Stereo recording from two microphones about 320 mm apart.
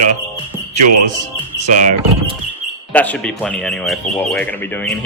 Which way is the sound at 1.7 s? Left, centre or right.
Right.